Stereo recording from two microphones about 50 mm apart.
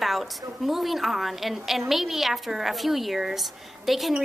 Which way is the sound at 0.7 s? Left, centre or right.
Centre.